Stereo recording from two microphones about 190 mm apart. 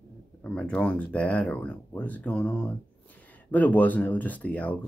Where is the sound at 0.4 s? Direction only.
5° left (ahead or behind).